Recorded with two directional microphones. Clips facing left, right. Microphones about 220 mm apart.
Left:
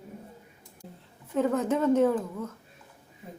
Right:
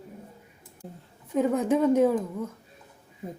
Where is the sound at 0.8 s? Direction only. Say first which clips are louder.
Right 4 dB; 50° right (ahead or behind).